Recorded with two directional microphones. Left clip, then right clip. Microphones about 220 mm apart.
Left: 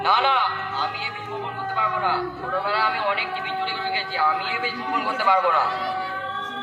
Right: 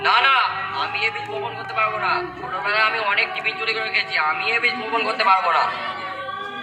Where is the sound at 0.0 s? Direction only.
35° right (ahead or behind).